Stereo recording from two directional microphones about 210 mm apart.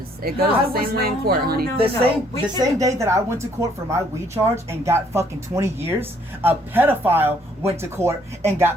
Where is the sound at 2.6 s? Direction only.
15° right (ahead or behind).